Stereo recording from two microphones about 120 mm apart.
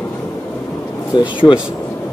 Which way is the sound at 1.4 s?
30° left (ahead or behind).